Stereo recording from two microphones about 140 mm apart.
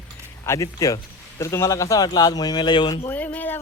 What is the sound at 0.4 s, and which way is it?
Speech, 20° left (ahead or behind).